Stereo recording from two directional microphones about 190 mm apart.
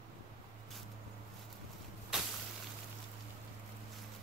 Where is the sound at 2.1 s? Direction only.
5° right (ahead or behind).